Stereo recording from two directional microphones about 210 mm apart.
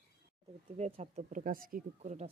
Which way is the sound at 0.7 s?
30° right (ahead or behind).